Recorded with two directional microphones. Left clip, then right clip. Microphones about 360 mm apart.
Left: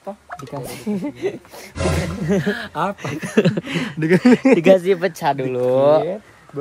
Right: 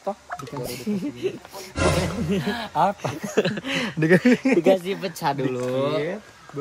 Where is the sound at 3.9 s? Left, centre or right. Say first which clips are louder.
Left 1 dB; centre.